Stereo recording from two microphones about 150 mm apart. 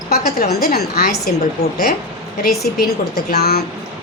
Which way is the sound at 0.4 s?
90° left.